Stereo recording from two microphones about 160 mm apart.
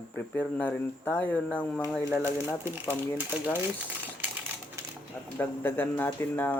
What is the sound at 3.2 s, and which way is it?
Speech, 10° right (ahead or behind).